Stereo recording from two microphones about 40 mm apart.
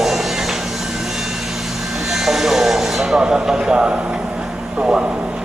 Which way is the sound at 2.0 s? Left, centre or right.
Centre.